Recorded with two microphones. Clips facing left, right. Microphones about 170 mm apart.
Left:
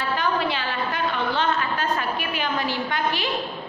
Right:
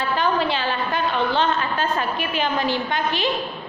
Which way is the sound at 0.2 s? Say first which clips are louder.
Right 5 dB; 30° right (ahead or behind).